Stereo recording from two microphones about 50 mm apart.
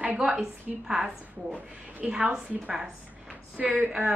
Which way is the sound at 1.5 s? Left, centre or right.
Right.